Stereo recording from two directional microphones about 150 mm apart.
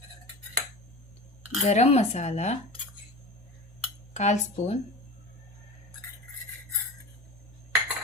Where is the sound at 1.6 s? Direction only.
45° left (ahead or behind).